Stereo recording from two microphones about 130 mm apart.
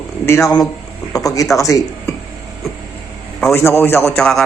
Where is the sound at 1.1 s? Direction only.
25° left (ahead or behind).